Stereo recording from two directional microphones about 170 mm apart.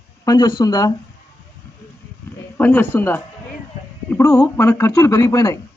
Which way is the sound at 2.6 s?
10° left (ahead or behind).